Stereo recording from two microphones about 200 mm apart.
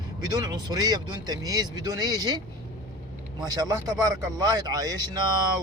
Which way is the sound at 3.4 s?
20° right (ahead or behind).